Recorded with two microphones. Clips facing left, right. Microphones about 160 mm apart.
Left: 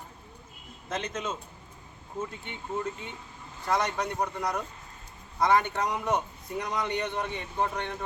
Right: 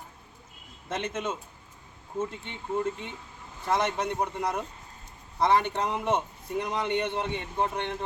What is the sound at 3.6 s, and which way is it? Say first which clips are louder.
A man's voice: right 1 dB; 25° right (ahead or behind).